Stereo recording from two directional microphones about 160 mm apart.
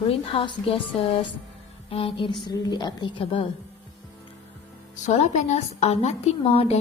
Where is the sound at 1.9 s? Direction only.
35° left (ahead or behind).